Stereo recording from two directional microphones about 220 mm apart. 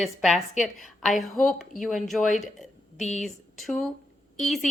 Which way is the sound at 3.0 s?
30° left (ahead or behind).